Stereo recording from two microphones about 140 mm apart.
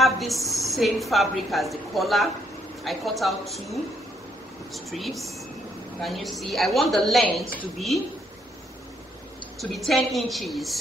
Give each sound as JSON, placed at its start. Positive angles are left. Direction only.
{"t": 0.0, "sound": "a sound", "side_deg": 0}
{"t": 0.5, "sound": "a woman's voice", "side_deg": 0}
{"t": 4.7, "sound": "a woman's voice", "side_deg": 0}
{"t": 9.6, "sound": "a woman's voice", "side_deg": 0}